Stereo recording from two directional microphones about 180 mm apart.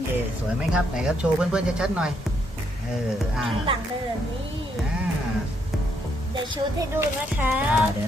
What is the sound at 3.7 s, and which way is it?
Speech, 30° right (ahead or behind).